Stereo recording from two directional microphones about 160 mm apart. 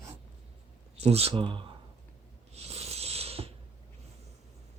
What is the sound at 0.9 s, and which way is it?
Speech, 40° right (ahead or behind).